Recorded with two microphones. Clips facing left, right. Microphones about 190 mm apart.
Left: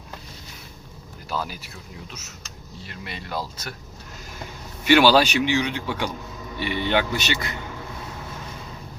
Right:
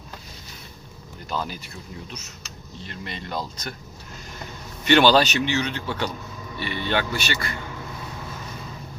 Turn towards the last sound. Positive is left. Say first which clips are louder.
# left 1 dB
turn(degrees=20)  # may be behind; listen again after turning